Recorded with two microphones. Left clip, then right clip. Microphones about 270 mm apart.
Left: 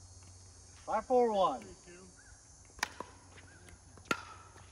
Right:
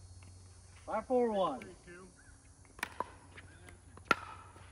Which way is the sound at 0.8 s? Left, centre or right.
Left.